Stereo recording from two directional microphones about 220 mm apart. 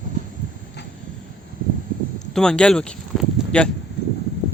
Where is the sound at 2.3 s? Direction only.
5° left (ahead or behind).